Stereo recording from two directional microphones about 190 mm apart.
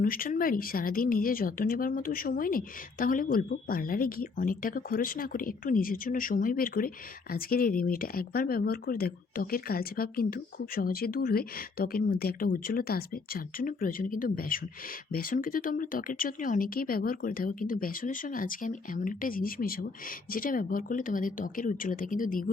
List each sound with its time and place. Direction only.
0.0 s speech: 50° left (ahead or behind)